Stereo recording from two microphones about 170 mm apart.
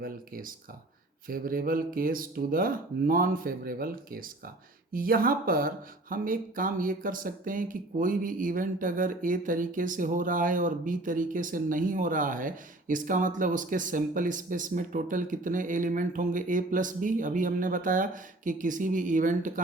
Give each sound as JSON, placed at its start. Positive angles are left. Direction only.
{"t": 0.0, "sound": "speech", "side_deg": -55}